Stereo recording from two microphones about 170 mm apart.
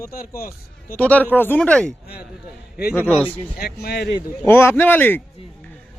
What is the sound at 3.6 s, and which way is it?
Speech, 65° left (ahead or behind).